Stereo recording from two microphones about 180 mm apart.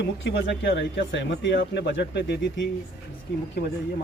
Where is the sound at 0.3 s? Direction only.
85° left.